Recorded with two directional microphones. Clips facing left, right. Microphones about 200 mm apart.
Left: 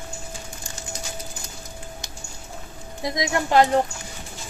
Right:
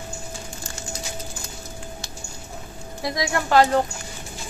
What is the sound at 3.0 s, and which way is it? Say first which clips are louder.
Speech: left 1 dB; 20° left (ahead or behind).